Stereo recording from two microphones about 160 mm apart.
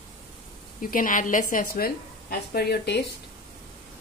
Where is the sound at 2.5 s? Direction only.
85° left.